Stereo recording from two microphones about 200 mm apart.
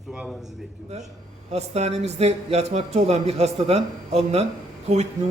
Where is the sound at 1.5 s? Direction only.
30° right (ahead or behind).